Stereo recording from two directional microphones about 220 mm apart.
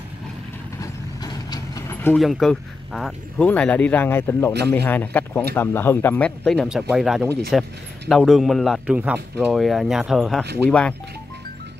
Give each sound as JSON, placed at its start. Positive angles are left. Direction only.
{"t": 1.2, "sound": "vehicle", "side_deg": 15}
{"t": 2.2, "sound": "speech", "side_deg": 0}
{"t": 4.6, "sound": "a man's voice", "side_deg": -50}
{"t": 4.8, "sound": "speech", "side_deg": 10}